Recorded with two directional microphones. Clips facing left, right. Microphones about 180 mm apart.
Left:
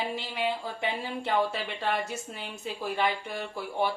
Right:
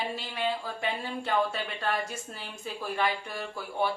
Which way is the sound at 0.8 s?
25° left (ahead or behind).